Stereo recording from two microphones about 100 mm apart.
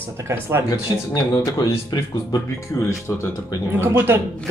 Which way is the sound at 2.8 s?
30° left (ahead or behind).